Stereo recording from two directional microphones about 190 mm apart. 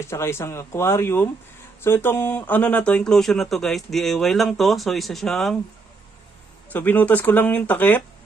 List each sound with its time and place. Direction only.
0.1 s speech: 15° left (ahead or behind)
6.7 s speech: 10° left (ahead or behind)